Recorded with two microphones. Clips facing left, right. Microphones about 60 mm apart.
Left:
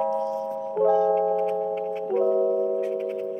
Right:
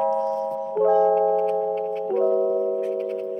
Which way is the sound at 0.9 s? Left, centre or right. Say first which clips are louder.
Right 3 dB; right.